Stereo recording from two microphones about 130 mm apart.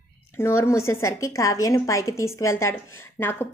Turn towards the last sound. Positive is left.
turn(degrees=15)  # may be behind; listen again after turning